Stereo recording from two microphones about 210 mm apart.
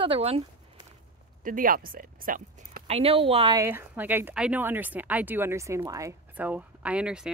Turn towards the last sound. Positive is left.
turn(degrees=-5)  # may be behind; listen again after turning